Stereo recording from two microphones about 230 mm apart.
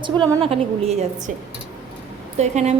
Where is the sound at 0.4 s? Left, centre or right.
Right.